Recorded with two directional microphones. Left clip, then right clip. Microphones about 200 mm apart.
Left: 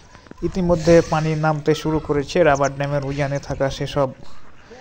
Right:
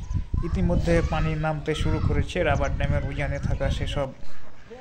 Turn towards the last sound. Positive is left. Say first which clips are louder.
# left 8 dB
turn(degrees=35)  # may be behind; listen again after turning